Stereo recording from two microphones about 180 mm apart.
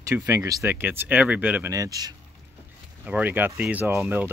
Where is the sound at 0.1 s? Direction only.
15° right (ahead or behind).